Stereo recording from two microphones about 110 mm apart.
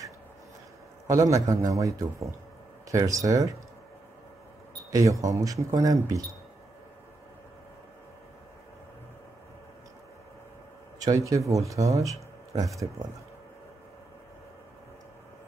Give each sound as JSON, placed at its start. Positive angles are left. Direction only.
{"t": 1.0, "sound": "a man's voice", "side_deg": -30}
{"t": 4.9, "sound": "speech", "side_deg": -30}
{"t": 11.0, "sound": "speech", "side_deg": -30}